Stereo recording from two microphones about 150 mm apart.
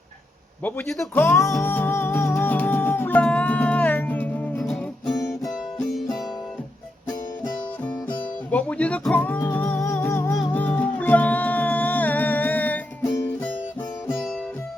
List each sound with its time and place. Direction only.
0.6 s speech: 5° left (ahead or behind)
1.6 s music: 15° left (ahead or behind)
8.4 s music: 10° left (ahead or behind)